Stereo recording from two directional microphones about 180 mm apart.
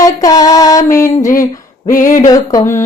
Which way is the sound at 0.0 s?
20° left (ahead or behind).